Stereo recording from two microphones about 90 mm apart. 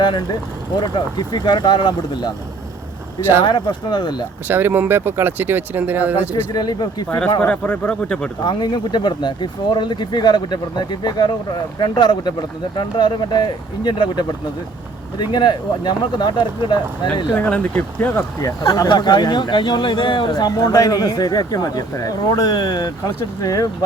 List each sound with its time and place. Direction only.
0.0 s speech: 55° left (ahead or behind)
3.4 s speech: 55° left (ahead or behind)
4.4 s speech: 20° right (ahead or behind)
6.3 s speech: 50° left (ahead or behind)
7.4 s speech: 15° left (ahead or behind)
8.4 s speech: 55° left (ahead or behind)
15.3 s speech: 55° left (ahead or behind)
17.3 s speech: 20° left (ahead or behind)
18.9 s speech: 55° left (ahead or behind)